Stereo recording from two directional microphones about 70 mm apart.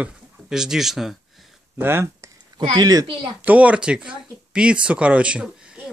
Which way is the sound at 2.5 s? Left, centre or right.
Right.